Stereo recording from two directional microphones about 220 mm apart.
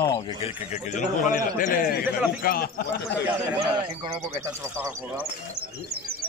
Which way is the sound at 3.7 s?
20° right (ahead or behind).